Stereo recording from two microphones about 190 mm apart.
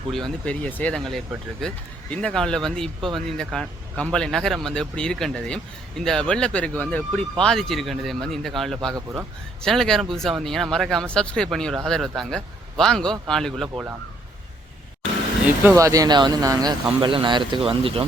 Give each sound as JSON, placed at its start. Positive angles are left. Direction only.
{"t": 0.1, "sound": "speech", "side_deg": 5}
{"t": 15.6, "sound": "speech", "side_deg": -15}